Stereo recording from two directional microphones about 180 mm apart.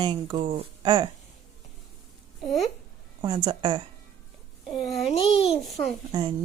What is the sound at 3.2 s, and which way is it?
Speech, 25° right (ahead or behind).